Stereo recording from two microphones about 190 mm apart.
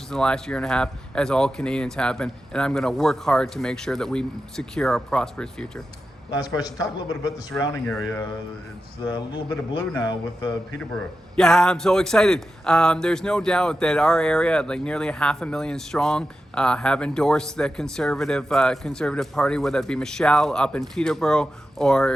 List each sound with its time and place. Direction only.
0.1 s a man's voice: 5° left (ahead or behind)
6.3 s a man's voice: 20° left (ahead or behind)
10.9 s a man's voice: 5° left (ahead or behind)